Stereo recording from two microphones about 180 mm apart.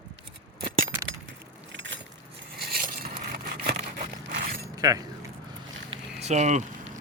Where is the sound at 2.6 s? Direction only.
55° right (ahead or behind).